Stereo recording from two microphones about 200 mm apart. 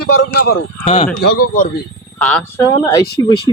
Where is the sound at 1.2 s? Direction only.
50° left (ahead or behind).